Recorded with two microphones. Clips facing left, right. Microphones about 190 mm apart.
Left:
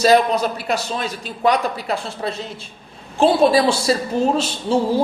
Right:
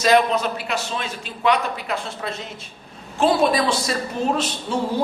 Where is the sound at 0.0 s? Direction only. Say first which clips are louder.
Left 3 dB; 40° left (ahead or behind).